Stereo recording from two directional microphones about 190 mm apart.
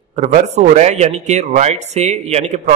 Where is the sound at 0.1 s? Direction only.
40° right (ahead or behind).